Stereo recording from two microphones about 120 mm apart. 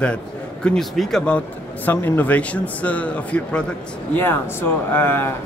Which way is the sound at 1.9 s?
15° left (ahead or behind).